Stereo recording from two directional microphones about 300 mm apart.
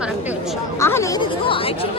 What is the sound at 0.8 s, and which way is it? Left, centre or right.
Speech, centre.